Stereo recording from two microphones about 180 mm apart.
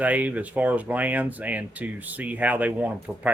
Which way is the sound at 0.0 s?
10° right (ahead or behind).